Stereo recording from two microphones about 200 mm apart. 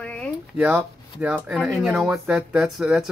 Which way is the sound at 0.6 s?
5° right (ahead or behind).